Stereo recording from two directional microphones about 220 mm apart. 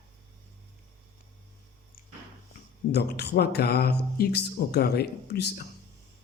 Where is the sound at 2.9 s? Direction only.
50° left (ahead or behind).